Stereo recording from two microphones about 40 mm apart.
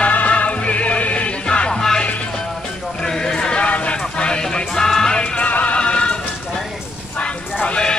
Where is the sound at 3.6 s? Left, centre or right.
Left.